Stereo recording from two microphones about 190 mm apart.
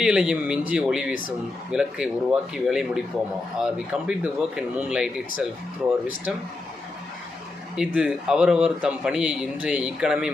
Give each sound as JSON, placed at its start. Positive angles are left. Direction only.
{"t": 0.0, "sound": "a man's voice", "side_deg": -5}
{"t": 7.9, "sound": "a man's voice", "side_deg": -5}